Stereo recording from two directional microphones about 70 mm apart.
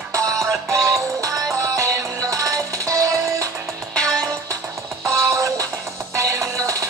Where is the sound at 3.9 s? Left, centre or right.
Centre.